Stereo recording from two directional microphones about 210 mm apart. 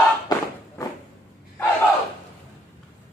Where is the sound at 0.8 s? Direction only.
15° left (ahead or behind).